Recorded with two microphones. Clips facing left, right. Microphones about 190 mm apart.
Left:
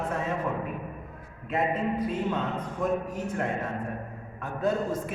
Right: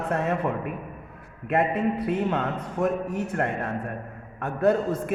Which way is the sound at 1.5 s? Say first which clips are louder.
Right 4 dB; 65° right (ahead or behind).